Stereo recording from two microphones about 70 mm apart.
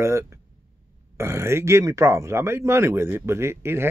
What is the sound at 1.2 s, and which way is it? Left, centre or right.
Speech, right.